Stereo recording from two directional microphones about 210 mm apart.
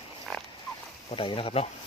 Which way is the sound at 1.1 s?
25° left (ahead or behind).